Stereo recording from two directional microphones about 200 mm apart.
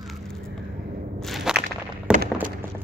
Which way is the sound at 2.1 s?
5° right (ahead or behind).